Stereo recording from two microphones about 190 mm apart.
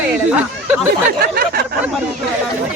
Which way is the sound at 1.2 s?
50° right (ahead or behind).